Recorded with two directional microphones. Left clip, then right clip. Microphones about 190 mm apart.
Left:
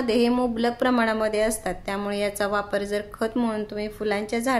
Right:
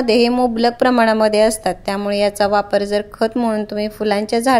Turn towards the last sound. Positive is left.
turn(degrees=-40)  # may be behind; listen again after turning